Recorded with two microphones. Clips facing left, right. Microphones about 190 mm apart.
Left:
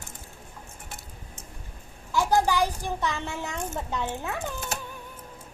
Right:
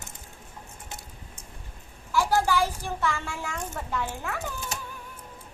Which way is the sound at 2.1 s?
15° left (ahead or behind).